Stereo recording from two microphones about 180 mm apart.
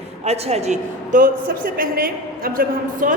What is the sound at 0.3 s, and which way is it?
A woman's voice, 35° right (ahead or behind).